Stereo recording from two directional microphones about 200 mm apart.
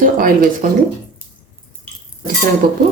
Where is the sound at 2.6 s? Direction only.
45° right (ahead or behind).